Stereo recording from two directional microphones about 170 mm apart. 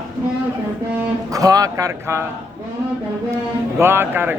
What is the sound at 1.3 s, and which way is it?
Speech, 20° right (ahead or behind).